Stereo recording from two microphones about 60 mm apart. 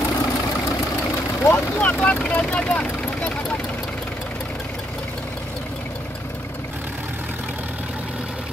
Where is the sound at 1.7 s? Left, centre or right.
Left.